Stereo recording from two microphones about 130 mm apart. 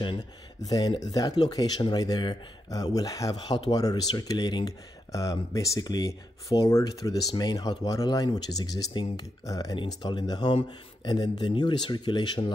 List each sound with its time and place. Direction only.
0.0 s speech: 35° left (ahead or behind)